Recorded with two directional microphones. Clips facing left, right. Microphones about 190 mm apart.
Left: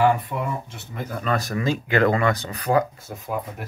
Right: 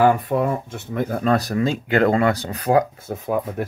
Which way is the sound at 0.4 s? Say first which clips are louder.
Right 6 dB; 55° right (ahead or behind).